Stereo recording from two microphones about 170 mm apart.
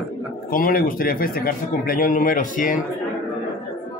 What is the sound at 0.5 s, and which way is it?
Speech, 55° left (ahead or behind).